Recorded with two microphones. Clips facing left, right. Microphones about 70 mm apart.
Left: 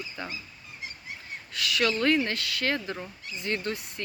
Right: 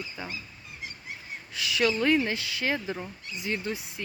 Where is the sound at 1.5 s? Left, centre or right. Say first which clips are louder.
Right 1 dB; centre.